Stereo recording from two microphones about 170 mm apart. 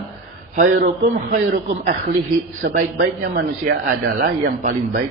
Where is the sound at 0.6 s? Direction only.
50° right (ahead or behind).